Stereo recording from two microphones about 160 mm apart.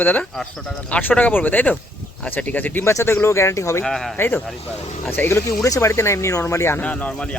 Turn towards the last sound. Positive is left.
turn(degrees=5)  # may be behind; listen again after turning